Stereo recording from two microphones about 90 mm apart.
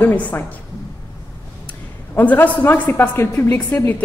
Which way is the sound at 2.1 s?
20° left (ahead or behind).